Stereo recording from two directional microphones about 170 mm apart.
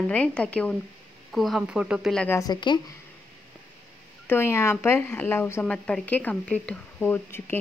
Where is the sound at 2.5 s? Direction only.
25° left (ahead or behind).